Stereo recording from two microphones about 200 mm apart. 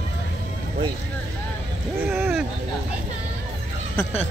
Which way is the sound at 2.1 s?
10° right (ahead or behind).